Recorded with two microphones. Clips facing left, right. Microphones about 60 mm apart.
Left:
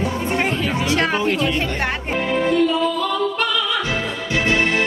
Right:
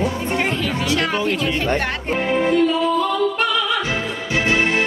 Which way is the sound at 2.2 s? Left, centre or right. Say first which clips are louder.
Right 1 dB; centre.